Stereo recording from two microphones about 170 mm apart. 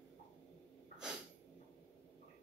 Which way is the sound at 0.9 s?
5° right (ahead or behind).